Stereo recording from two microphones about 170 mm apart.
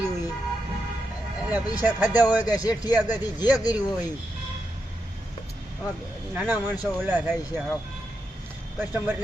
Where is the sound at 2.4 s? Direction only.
20° left (ahead or behind).